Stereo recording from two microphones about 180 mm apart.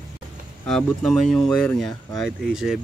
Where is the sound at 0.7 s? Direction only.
5° left (ahead or behind).